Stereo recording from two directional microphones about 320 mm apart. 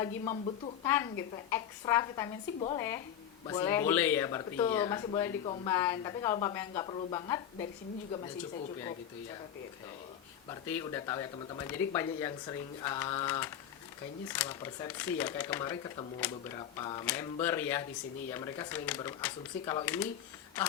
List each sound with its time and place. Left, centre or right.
0.0 s speech: centre
10.5 s speech: centre